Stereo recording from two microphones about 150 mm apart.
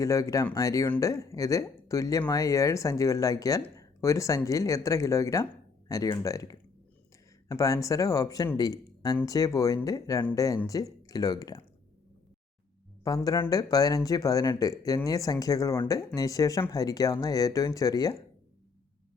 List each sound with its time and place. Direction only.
0.0 s speech: 20° left (ahead or behind)
13.1 s speech: 25° left (ahead or behind)